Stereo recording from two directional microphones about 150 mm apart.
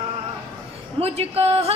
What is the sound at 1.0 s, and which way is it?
Speech, 40° right (ahead or behind).